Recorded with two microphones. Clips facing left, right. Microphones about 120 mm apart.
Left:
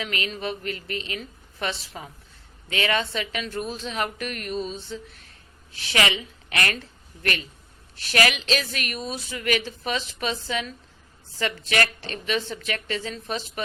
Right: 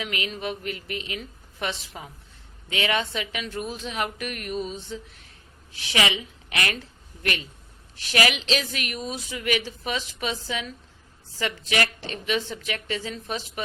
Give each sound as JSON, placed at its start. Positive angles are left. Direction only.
{"t": 0.0, "sound": "a woman's voice", "side_deg": -15}